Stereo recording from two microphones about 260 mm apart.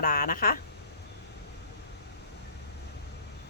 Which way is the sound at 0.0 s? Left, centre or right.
Left.